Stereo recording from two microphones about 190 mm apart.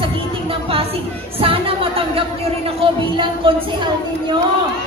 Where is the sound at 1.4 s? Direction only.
30° right (ahead or behind).